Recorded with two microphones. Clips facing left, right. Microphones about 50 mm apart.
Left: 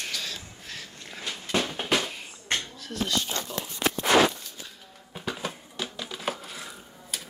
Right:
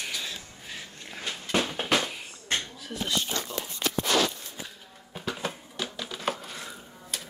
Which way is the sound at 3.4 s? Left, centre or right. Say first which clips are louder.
Left 1 dB; left.